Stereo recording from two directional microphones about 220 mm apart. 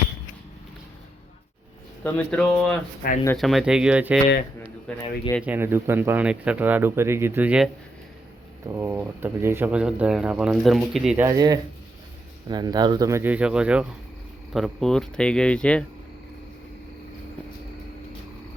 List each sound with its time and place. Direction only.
2.0 s speech: 5° left (ahead or behind)
5.4 s speech: 10° right (ahead or behind)
11.3 s speech: 15° right (ahead or behind); by 15.8 s 5° left (ahead or behind)